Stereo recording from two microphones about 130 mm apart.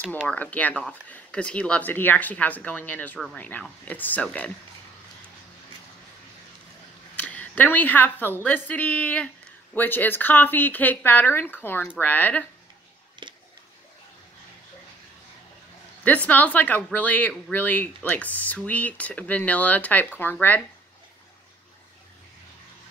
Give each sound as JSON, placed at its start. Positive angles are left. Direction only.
{"t": 0.3, "sound": "speech", "side_deg": 10}
{"t": 7.2, "sound": "a woman's voice", "side_deg": 10}
{"t": 13.2, "sound": "a sound", "side_deg": -40}
{"t": 16.0, "sound": "speech", "side_deg": 10}